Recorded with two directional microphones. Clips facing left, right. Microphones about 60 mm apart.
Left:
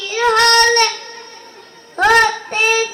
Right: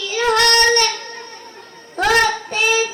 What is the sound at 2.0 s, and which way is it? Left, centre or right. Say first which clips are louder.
Child singing: left 4 dB; left.